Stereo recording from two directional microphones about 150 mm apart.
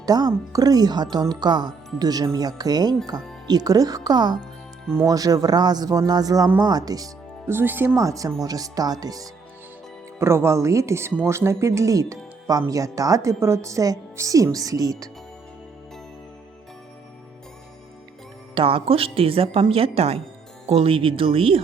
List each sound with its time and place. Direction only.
0.0 s speech: 25° right (ahead or behind)
18.5 s speech: 35° right (ahead or behind)